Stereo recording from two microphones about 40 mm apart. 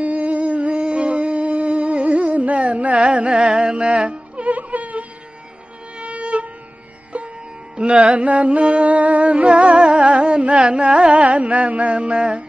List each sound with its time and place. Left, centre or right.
0.0 s music: right
7.7 s music: right